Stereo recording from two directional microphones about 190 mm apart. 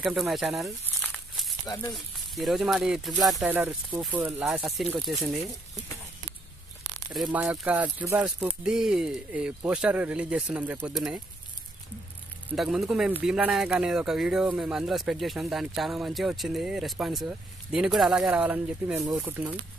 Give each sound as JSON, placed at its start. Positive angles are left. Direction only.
{"t": 0.0, "sound": "speech", "side_deg": 0}
{"t": 0.8, "sound": "crumpling", "side_deg": 5}
{"t": 1.7, "sound": "speech", "side_deg": 20}
{"t": 2.0, "sound": "speech", "side_deg": 0}
{"t": 3.5, "sound": "speech", "side_deg": -10}
{"t": 7.1, "sound": "speech", "side_deg": 0}
{"t": 12.5, "sound": "speech", "side_deg": -5}